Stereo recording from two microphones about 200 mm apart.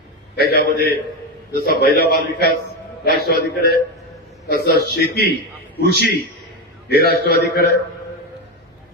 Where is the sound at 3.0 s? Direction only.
50° left (ahead or behind).